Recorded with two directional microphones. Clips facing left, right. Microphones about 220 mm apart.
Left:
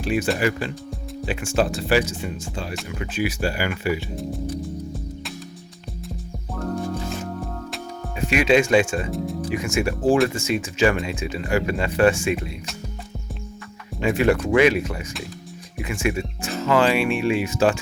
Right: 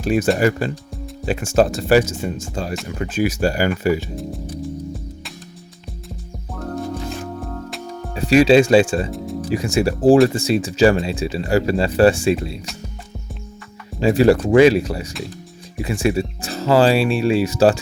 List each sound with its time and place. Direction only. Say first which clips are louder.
0.0 s speech: right 5 dB; 45° right (ahead or behind)
4.1 s speech: right 1 dB; centre (ahead or behind)
8.1 s speech: right 6 dB; 35° right (ahead or behind)
9.0 s speech: left 1 dB; centre (ahead or behind)
9.5 s speech: right 6 dB; 35° right (ahead or behind)
14.0 s speech: right 5 dB; 35° right (ahead or behind)